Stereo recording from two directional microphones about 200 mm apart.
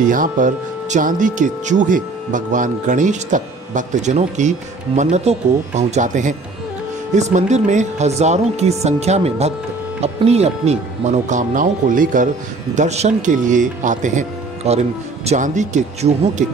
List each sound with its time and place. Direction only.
0.1 s speech: 40° right (ahead or behind)